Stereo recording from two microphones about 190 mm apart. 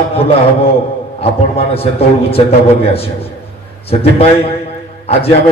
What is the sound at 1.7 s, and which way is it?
A man's voice, 30° left (ahead or behind).